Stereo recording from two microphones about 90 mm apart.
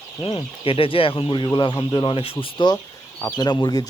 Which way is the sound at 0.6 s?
90° left.